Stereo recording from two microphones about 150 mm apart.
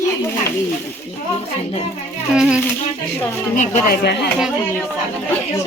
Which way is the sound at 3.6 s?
55° left (ahead or behind).